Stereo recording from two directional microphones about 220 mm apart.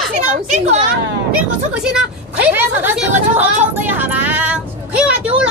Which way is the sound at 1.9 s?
5° right (ahead or behind).